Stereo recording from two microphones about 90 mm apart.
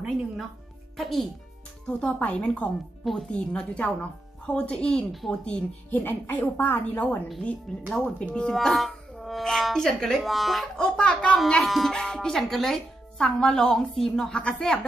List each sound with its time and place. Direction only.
0.9 s speech: centre (ahead or behind)
1.9 s speech: 20° left (ahead or behind); by 5.4 s centre (ahead or behind)
5.4 s a woman's voice: 15° left (ahead or behind)
11.0 s speech: 15° left (ahead or behind)
11.3 s speech: 5° left (ahead or behind)